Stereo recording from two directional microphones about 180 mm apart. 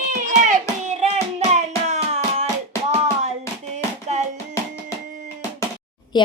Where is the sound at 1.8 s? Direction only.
35° right (ahead or behind).